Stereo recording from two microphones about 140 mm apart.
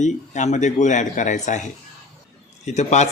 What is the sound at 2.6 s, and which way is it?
Speech, 55° left (ahead or behind).